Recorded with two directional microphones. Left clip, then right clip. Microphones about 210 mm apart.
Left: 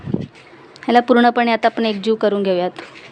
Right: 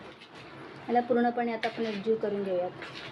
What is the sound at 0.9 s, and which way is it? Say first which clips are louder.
Speech: left 13 dB; 50° left (ahead or behind).